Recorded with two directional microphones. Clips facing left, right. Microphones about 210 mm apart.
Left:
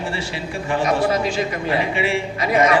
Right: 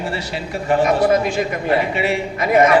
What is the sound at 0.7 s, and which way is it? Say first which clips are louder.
A man's voice: right 4 dB; 55° right (ahead or behind).